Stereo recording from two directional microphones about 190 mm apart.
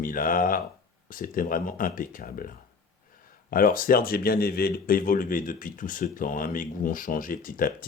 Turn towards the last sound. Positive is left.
turn(degrees=50)  # may be behind; listen again after turning